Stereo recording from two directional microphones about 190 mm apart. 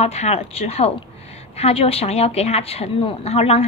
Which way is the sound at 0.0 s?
35° left (ahead or behind).